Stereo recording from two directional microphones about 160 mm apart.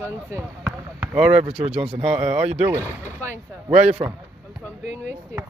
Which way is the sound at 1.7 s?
35° right (ahead or behind).